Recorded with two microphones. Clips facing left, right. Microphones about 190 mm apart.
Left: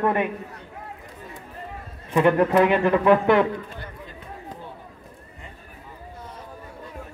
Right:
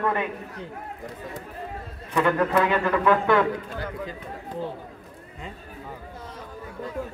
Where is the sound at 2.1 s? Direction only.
25° left (ahead or behind).